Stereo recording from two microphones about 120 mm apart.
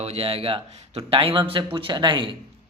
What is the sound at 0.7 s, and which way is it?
A man's voice, 60° right (ahead or behind).